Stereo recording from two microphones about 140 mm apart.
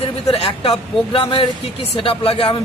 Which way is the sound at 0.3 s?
40° left (ahead or behind).